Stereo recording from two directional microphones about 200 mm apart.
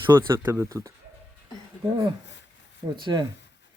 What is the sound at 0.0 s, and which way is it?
Speech, 20° right (ahead or behind).